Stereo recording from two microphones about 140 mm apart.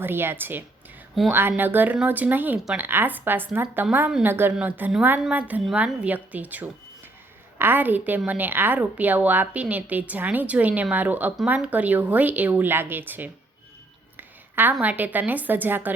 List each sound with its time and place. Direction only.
0.0 s a woman's voice: 15° right (ahead or behind)